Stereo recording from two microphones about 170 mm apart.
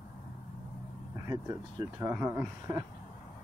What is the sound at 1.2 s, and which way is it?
Speech, 20° right (ahead or behind).